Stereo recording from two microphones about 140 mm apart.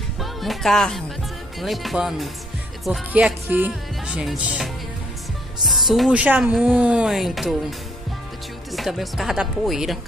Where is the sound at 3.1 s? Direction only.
10° right (ahead or behind).